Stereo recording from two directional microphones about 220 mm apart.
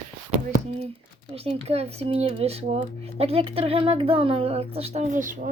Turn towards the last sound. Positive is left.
turn(degrees=-35)  # may be behind; listen again after turning